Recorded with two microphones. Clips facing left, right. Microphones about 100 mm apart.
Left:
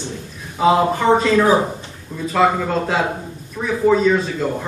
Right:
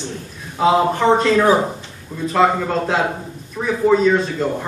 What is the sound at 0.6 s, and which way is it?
A man's voice, centre (ahead or behind).